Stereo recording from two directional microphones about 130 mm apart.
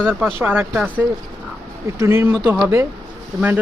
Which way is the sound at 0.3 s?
15° right (ahead or behind).